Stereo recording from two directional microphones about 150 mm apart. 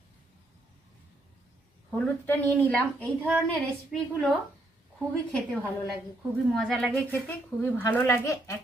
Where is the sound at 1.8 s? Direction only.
10° left (ahead or behind).